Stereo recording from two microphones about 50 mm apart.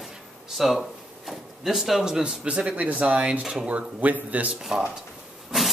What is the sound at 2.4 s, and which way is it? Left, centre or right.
Speech, right.